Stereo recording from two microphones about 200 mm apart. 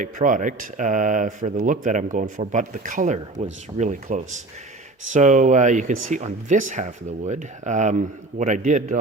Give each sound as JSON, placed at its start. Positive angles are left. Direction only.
{"t": 0.0, "sound": "speech", "side_deg": -40}